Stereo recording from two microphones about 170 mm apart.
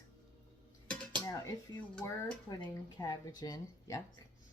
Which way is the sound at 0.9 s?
5° left (ahead or behind).